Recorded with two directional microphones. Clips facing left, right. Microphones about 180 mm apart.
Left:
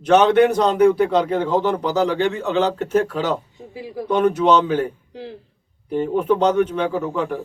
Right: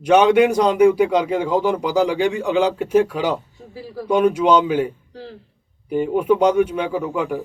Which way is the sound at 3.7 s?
15° left (ahead or behind).